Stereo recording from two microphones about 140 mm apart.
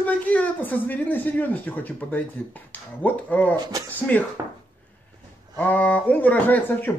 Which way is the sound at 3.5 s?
30° right (ahead or behind).